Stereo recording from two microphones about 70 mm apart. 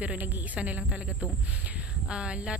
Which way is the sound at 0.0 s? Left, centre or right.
Right.